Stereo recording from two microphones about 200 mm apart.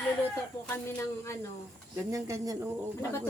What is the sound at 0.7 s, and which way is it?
Speech, 10° left (ahead or behind).